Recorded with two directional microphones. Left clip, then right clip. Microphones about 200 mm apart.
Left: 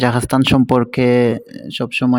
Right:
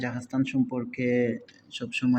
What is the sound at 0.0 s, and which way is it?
Speech, 55° left (ahead or behind).